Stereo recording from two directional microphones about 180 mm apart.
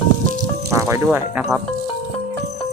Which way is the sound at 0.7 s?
15° right (ahead or behind).